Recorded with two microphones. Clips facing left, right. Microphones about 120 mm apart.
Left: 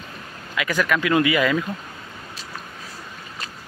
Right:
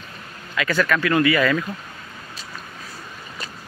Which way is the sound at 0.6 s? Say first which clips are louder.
Right 1 dB; 10° left (ahead or behind).